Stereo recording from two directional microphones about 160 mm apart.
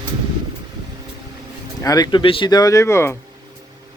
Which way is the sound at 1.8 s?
25° left (ahead or behind).